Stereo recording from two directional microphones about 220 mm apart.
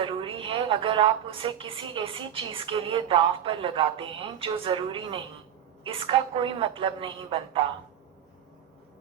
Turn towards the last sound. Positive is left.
turn(degrees=-25)  # may be behind; listen again after turning